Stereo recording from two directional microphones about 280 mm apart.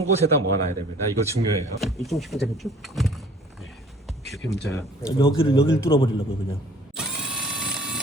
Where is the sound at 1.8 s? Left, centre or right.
Centre.